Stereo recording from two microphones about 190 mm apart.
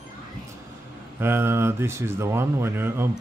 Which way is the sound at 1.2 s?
10° right (ahead or behind).